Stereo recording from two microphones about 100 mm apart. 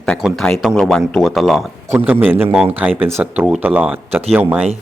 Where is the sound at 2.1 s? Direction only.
20° right (ahead or behind).